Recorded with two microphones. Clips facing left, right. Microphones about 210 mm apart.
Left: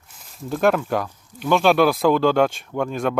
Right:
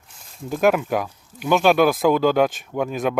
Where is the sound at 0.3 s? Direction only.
5° right (ahead or behind).